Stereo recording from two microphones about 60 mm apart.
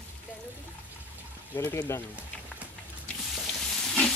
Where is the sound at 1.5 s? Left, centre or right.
Left.